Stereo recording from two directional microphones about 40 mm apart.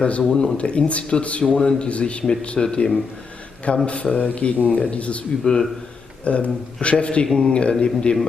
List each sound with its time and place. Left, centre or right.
0.0 s speech: left
2.6 s a man's voice: centre
3.8 s speech: left
5.4 s a man's voice: centre
6.2 s a man's voice: left; by 8.2 s centre